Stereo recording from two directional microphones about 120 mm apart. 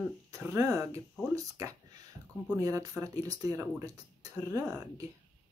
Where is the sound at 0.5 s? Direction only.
30° right (ahead or behind).